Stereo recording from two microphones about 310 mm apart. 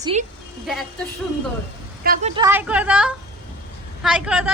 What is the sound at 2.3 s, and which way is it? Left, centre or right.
Speech, centre.